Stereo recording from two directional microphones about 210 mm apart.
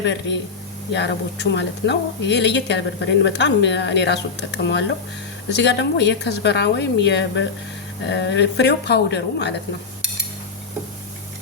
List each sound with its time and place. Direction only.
0.0 s a woman's voice: 55° left (ahead or behind)